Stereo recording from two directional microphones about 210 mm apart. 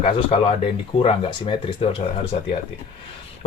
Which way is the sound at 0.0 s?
25° left (ahead or behind).